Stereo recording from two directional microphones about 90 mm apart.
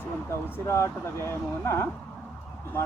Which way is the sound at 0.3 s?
30° left (ahead or behind).